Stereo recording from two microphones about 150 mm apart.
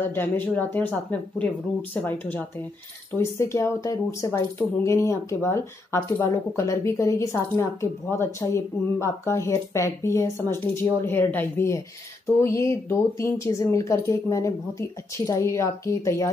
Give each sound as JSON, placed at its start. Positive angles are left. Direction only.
{"t": 0.1, "sound": "speech", "side_deg": 10}